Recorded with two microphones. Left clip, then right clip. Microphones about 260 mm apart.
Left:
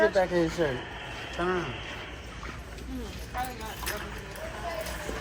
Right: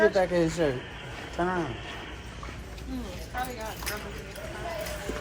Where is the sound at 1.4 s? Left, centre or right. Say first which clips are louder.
Right 1 dB; right.